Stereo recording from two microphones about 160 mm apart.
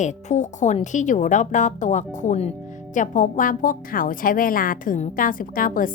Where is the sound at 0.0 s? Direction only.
45° left (ahead or behind).